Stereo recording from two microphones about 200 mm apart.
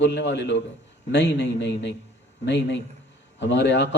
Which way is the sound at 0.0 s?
60° left (ahead or behind).